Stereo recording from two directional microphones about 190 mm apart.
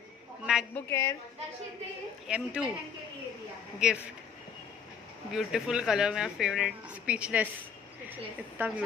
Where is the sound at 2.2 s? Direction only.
5° right (ahead or behind).